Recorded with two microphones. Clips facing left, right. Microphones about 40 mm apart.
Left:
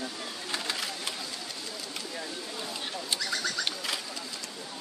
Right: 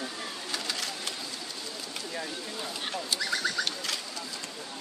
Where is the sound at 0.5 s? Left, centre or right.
Centre.